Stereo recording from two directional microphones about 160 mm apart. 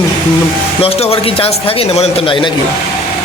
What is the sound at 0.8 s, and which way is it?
Speech, 35° left (ahead or behind).